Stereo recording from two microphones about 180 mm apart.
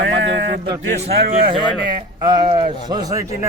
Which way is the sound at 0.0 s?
80° right.